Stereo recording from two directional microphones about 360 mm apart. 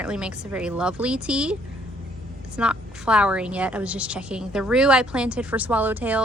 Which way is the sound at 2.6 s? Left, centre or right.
Centre.